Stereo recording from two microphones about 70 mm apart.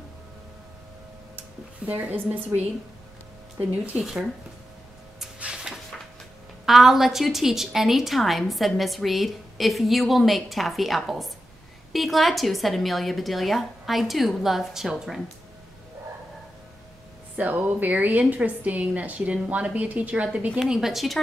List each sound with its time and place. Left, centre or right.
1.9 s a woman's voice: right
4.0 s speech: centre
5.4 s a sound: centre
6.6 s a woman's voice: centre
17.4 s a woman's voice: right
20.6 s a woman's voice: centre